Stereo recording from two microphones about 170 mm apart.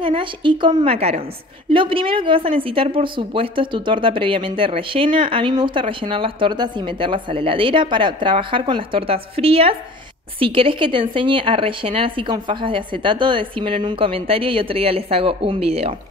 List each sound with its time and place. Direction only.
0.0 s a woman's voice: 30° right (ahead or behind)